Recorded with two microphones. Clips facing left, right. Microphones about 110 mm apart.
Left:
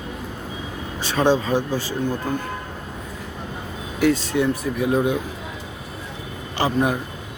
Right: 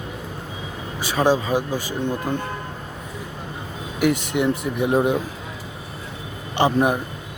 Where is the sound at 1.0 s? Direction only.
10° right (ahead or behind).